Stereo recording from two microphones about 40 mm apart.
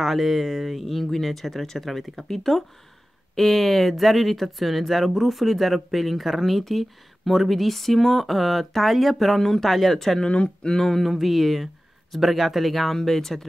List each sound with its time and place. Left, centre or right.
0.0 s speech: centre
10.2 s speech: left
10.7 s speech: centre